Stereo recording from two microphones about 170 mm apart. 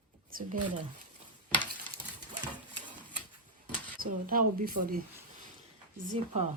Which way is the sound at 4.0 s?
55° right (ahead or behind).